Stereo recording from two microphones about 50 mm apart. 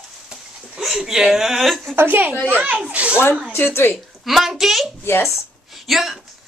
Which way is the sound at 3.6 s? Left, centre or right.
Left.